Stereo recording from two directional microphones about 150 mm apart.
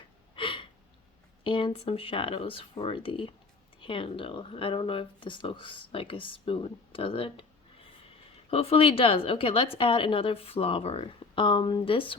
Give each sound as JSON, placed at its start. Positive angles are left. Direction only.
{"t": 0.3, "sound": "a sound", "side_deg": 35}
{"t": 1.5, "sound": "speech", "side_deg": 35}
{"t": 8.4, "sound": "speech", "side_deg": 40}